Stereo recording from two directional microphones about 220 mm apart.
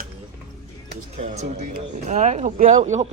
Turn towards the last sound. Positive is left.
turn(degrees=-30)  # may be behind; listen again after turning